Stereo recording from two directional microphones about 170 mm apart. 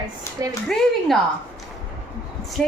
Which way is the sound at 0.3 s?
15° left (ahead or behind).